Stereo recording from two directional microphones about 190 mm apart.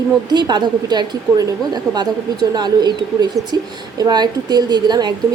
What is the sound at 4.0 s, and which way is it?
A woman's voice, 20° right (ahead or behind).